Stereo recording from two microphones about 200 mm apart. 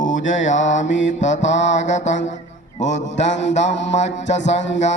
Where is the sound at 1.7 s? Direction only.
35° left (ahead or behind).